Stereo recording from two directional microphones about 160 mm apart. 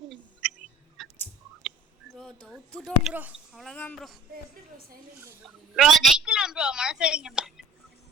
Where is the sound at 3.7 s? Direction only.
10° left (ahead or behind).